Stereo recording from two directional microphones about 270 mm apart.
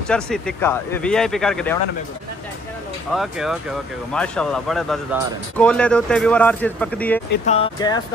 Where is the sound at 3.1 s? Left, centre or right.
Centre.